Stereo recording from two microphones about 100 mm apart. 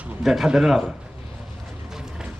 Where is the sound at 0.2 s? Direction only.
Centre (ahead or behind).